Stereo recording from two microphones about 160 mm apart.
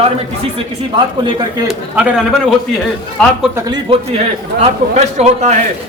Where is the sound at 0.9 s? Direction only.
30° right (ahead or behind).